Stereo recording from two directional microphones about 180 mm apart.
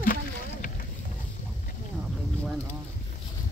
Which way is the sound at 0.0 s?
50° left (ahead or behind).